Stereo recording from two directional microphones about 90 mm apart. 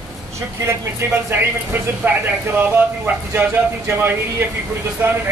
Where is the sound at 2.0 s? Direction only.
20° right (ahead or behind).